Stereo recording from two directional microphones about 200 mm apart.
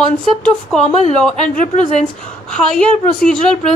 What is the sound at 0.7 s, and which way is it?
Speech, 5° left (ahead or behind).